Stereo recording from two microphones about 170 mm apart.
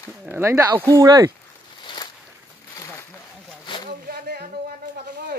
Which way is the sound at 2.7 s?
20° left (ahead or behind).